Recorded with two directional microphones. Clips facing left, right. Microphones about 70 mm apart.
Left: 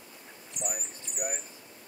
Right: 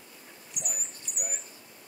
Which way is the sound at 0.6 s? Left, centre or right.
Left.